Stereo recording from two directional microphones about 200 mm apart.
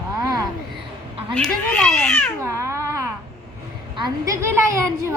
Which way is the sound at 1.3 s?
5° left (ahead or behind).